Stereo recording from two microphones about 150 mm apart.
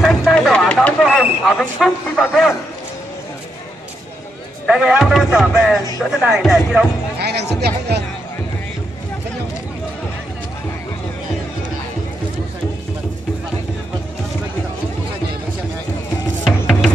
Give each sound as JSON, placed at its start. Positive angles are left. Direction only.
{"t": 0.0, "sound": "a sound", "side_deg": 0}
{"t": 4.6, "sound": "speech", "side_deg": -5}
{"t": 7.2, "sound": "speech", "side_deg": -90}
{"t": 16.4, "sound": "music", "side_deg": 0}